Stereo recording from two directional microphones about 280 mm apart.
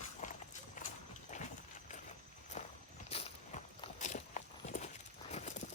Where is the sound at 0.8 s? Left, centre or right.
Left.